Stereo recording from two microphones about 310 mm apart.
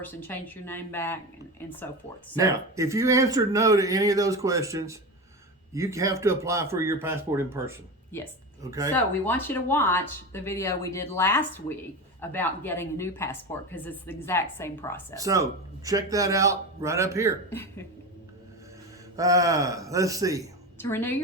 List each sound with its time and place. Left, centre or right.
0.0 s speech: centre
2.4 s a man's voice: centre
9.0 s speech: centre
15.1 s a man's voice: centre
19.1 s a man's voice: centre
20.7 s speech: centre